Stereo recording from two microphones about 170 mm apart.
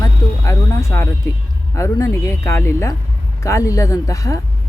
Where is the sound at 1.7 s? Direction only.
20° left (ahead or behind).